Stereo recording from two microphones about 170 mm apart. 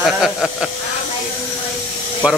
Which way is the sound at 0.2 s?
5° right (ahead or behind).